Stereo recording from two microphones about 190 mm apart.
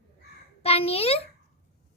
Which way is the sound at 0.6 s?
30° left (ahead or behind).